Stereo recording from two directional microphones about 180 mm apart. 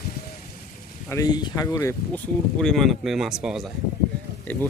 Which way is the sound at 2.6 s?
Centre (ahead or behind).